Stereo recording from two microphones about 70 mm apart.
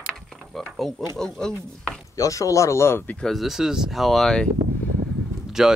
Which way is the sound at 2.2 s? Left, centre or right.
Left.